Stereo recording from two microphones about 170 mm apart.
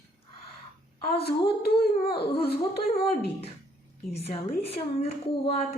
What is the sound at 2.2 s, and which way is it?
A woman's voice, 35° left (ahead or behind).